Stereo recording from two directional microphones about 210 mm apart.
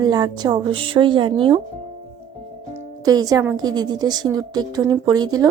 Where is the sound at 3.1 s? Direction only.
15° right (ahead or behind).